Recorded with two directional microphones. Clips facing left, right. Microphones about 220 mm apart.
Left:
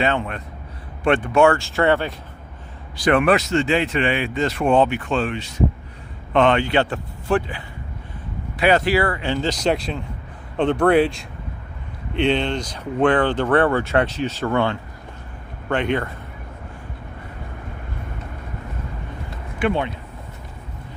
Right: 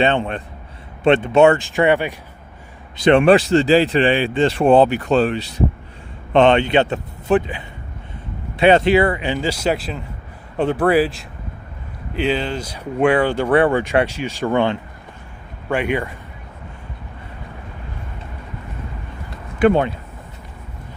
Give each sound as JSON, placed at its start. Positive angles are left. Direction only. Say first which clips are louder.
{"t": 0.0, "sound": "a man's voice", "louder": "right 4 dB", "side_deg": -30}
{"t": 3.0, "sound": "a man's voice", "louder": "right 5 dB", "side_deg": -25}
{"t": 19.5, "sound": "speech", "louder": "right 7 dB", "side_deg": -40}